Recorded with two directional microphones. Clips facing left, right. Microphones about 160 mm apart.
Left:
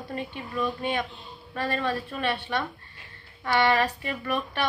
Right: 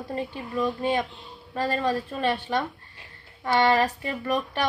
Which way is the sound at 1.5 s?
40° right (ahead or behind).